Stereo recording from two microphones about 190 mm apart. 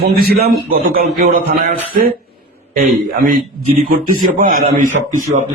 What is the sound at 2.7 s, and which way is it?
Speech, 50° right (ahead or behind).